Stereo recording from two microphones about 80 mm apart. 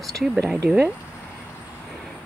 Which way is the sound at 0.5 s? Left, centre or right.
Centre.